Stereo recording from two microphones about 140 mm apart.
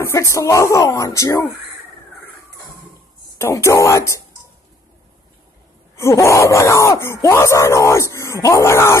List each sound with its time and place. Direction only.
0.0 s speech: 20° left (ahead or behind)
3.3 s speech: 20° left (ahead or behind)
5.9 s speech: 20° left (ahead or behind)